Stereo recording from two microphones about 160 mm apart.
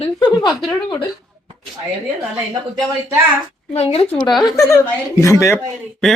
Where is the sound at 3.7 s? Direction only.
40° left (ahead or behind).